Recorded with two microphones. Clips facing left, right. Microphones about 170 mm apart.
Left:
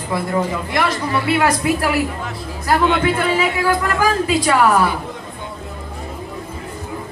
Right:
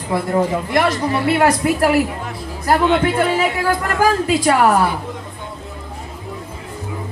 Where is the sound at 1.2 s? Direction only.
50° right (ahead or behind).